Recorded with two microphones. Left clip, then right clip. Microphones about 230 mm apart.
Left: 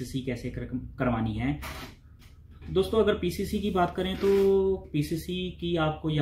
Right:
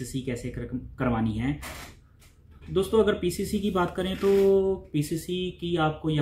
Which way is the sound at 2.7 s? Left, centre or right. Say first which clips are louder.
Right 1 dB; centre.